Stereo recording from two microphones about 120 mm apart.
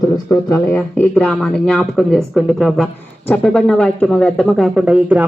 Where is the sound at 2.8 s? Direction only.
10° left (ahead or behind); by 5.2 s 15° right (ahead or behind).